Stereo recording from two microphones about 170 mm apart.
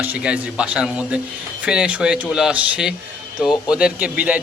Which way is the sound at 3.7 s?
5° right (ahead or behind).